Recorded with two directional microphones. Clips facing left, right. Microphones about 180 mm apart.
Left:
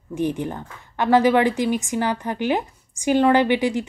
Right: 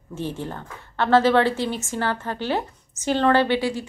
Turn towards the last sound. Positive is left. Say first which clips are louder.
# left 2 dB
turn(degrees=15)  # may be behind; listen again after turning